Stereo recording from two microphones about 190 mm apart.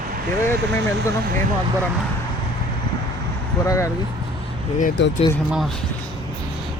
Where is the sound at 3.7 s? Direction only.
15° left (ahead or behind).